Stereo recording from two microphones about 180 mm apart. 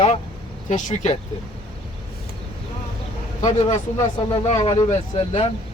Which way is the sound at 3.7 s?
30° left (ahead or behind).